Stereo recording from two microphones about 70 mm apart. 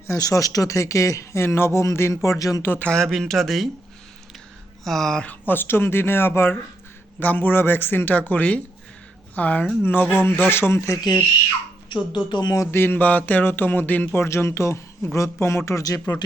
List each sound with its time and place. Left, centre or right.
0.1 s speech: left
2.8 s speech: centre
4.8 s speech: centre
5.2 s a woman's voice: left
12.1 s speech: left
12.7 s speech: left